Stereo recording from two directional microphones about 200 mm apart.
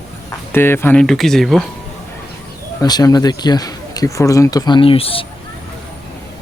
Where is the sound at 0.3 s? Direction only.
10° left (ahead or behind).